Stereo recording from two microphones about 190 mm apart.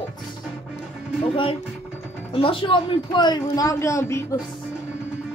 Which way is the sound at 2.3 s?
30° left (ahead or behind).